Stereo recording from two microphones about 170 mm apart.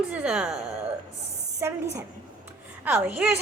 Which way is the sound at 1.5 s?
15° right (ahead or behind).